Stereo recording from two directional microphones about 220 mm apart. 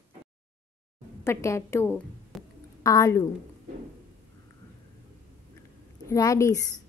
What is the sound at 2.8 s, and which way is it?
Speech, 15° left (ahead or behind).